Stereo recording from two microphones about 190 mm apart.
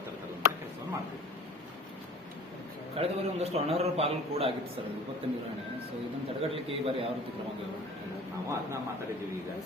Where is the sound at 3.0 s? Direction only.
30° right (ahead or behind).